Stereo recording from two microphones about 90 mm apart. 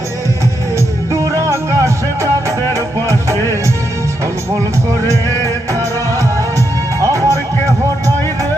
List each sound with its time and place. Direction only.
1.1 s music: 35° right (ahead or behind)
7.0 s music: 35° right (ahead or behind)